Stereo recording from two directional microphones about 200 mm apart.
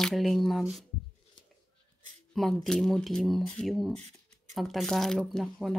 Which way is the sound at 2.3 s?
Centre (ahead or behind).